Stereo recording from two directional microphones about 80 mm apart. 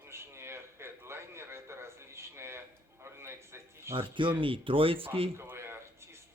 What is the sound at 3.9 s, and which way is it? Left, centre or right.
Speech, right.